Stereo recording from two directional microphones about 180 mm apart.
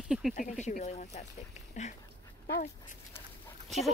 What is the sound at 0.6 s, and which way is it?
Speech, 40° left (ahead or behind).